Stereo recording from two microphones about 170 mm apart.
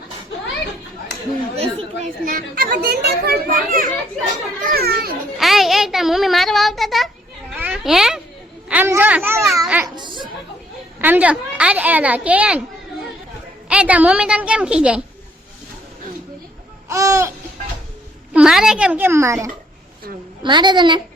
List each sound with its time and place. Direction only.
1.6 s speech: 35° right (ahead or behind)
2.2 s a child's voice: 60° right (ahead or behind)
4.6 s a sound: 65° right (ahead or behind)
5.4 s a child's voice: centre (ahead or behind)
7.5 s a sound: 5° right (ahead or behind)
8.7 s a child's voice: 10° right (ahead or behind)
9.8 s children playing: 25° right (ahead or behind)
11.0 s a child's voice: 10° right (ahead or behind)
13.7 s a woman's voice: 5° right (ahead or behind)
16.9 s a child's voice: 20° right (ahead or behind)
18.3 s a child's voice: 5° right (ahead or behind); by 21.0 s 25° right (ahead or behind)